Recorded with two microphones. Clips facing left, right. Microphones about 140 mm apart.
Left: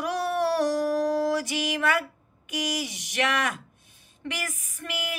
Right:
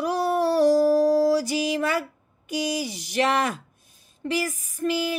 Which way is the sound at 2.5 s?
35° right (ahead or behind).